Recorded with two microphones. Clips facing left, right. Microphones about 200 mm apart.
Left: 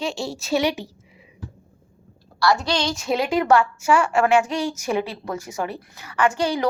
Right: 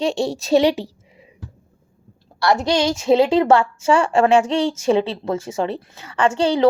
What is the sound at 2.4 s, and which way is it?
A woman's voice, 25° right (ahead or behind).